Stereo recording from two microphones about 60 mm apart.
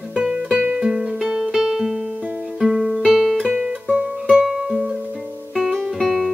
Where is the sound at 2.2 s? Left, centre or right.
Right.